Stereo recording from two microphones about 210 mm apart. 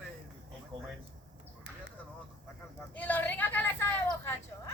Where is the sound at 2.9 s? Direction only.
10° left (ahead or behind).